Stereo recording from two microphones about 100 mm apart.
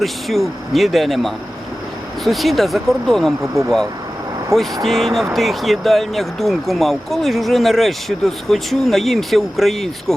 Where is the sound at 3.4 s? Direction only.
30° right (ahead or behind).